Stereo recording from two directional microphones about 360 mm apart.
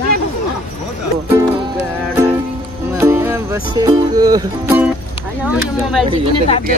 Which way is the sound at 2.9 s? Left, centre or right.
Centre.